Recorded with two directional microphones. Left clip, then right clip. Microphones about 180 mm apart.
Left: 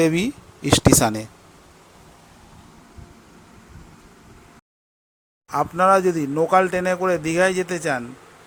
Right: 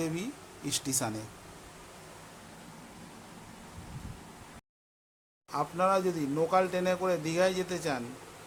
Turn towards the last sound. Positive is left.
turn(degrees=35)  # may be behind; listen again after turning